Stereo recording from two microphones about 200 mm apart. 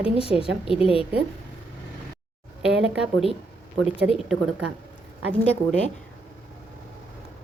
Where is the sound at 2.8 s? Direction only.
5° right (ahead or behind).